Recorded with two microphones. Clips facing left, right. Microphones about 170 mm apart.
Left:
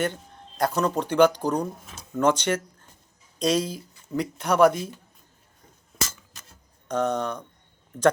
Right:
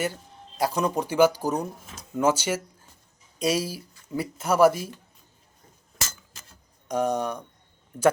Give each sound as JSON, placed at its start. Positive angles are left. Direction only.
{"t": 0.0, "sound": "speech", "side_deg": -5}
{"t": 6.8, "sound": "speech", "side_deg": -10}